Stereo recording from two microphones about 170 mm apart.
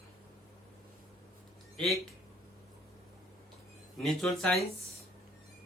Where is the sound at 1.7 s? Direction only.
Centre (ahead or behind).